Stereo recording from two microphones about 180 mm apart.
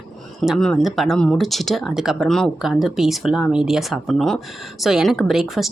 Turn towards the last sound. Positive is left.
turn(degrees=0)  # may be behind; listen again after turning